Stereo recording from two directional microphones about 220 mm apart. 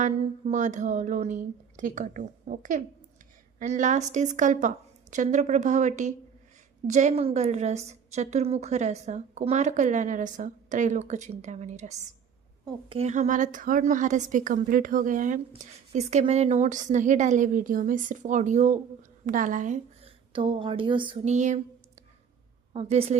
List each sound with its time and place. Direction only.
0.0 s a woman's voice: 35° right (ahead or behind)
22.7 s a woman's voice: 25° right (ahead or behind)